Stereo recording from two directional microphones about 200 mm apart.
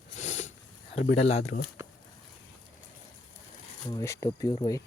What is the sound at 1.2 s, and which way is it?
Speech, 35° left (ahead or behind).